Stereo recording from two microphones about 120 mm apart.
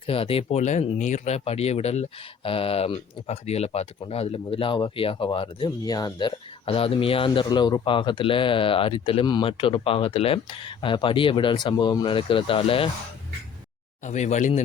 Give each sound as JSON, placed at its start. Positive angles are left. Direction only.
{"t": 0.0, "sound": "speech", "side_deg": 50}
{"t": 0.9, "sound": "speech", "side_deg": 90}
{"t": 14.0, "sound": "speech", "side_deg": 75}